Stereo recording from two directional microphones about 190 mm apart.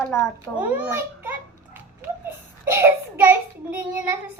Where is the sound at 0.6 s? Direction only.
10° right (ahead or behind).